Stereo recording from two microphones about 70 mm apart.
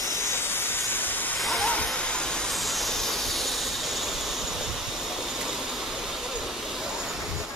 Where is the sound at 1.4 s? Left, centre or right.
Centre.